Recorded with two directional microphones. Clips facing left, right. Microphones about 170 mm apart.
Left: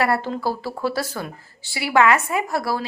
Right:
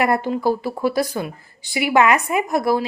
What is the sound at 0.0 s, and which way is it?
A woman's voice, 15° right (ahead or behind).